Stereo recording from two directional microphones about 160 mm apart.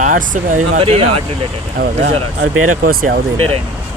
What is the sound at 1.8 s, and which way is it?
Speech, 80° right.